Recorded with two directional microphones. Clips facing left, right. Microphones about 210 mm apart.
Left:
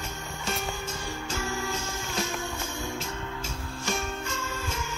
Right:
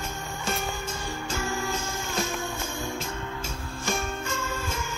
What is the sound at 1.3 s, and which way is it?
Music, 50° right (ahead or behind).